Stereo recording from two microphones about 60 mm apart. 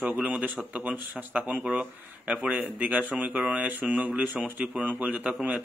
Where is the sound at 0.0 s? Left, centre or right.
Right.